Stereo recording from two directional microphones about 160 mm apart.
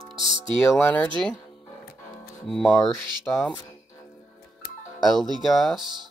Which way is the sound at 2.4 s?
5° left (ahead or behind).